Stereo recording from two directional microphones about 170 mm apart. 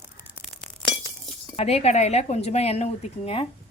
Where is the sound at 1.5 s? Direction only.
35° left (ahead or behind).